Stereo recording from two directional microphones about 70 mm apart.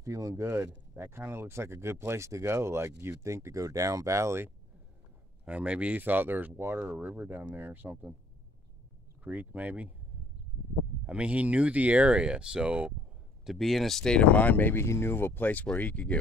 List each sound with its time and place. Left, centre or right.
0.0 s speech: right
0.4 s speech: right
5.4 s speech: centre
9.2 s speech: right
11.1 s speech: centre
13.5 s speech: centre; by 16.2 s left